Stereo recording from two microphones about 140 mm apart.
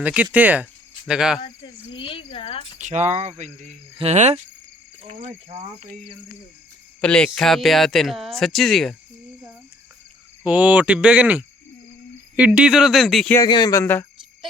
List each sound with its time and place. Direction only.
0.0 s speech: 10° right (ahead or behind)
1.4 s speech: 35° left (ahead or behind)
2.7 s speech: 60° right (ahead or behind)
3.9 s cricket: 50° right (ahead or behind)
7.0 s speech: 5° left (ahead or behind)
10.4 s speech: 10° right (ahead or behind)
13.5 s speech: 30° left (ahead or behind)
13.8 s speech: 15° left (ahead or behind)